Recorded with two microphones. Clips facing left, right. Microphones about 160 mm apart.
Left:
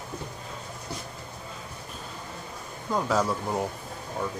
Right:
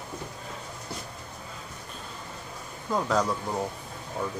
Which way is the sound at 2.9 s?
5° left (ahead or behind).